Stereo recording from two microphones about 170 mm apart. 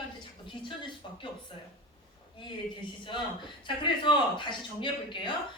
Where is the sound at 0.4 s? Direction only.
30° left (ahead or behind).